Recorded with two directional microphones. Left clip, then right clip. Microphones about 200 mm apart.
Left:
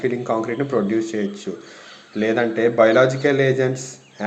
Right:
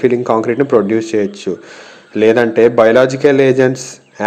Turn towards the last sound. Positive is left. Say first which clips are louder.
# right 9 dB
turn(degrees=-45)  # may be behind; listen again after turning